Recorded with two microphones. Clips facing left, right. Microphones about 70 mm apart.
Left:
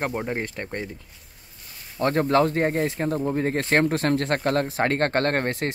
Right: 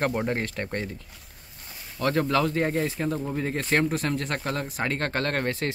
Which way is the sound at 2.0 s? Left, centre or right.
Left.